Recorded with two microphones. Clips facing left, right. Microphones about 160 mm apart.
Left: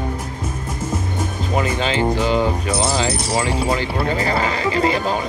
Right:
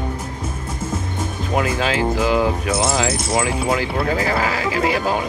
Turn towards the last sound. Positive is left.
turn(degrees=-5)  # may be behind; listen again after turning